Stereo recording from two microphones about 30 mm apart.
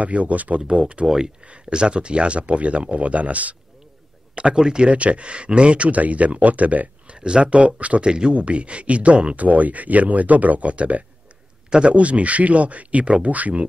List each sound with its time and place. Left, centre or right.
0.0 s speech: right
0.6 s speech: right
1.0 s speech: right
1.7 s speech: right
4.6 s speech: right
4.8 s speech: right
5.9 s speech: right
7.1 s speech: right
8.0 s speech: right
8.3 s speech: right